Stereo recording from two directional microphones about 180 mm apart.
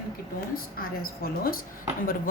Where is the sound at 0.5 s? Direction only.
55° left (ahead or behind).